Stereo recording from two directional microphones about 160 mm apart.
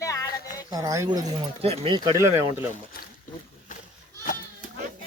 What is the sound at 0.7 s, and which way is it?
Speech, 20° right (ahead or behind).